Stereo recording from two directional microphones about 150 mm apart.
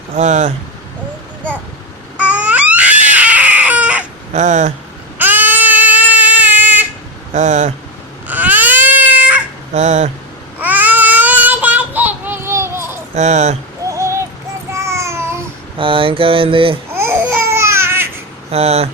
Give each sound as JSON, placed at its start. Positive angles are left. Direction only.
{"t": 0.2, "sound": "speech", "side_deg": -50}
{"t": 2.1, "sound": "crying", "side_deg": -10}
{"t": 4.3, "sound": "speech", "side_deg": -55}
{"t": 5.1, "sound": "a sound", "side_deg": -10}
{"t": 7.3, "sound": "speech", "side_deg": -50}
{"t": 8.3, "sound": "baby cry", "side_deg": -10}
{"t": 9.7, "sound": "speech", "side_deg": -50}
{"t": 10.6, "sound": "child singing", "side_deg": -10}
{"t": 13.1, "sound": "speech", "side_deg": -50}
{"t": 13.8, "sound": "a sound", "side_deg": -20}
{"t": 14.7, "sound": "babbling", "side_deg": -20}
{"t": 15.8, "sound": "mantra", "side_deg": -35}
{"t": 16.9, "sound": "babbling", "side_deg": -15}
{"t": 18.5, "sound": "speech", "side_deg": -45}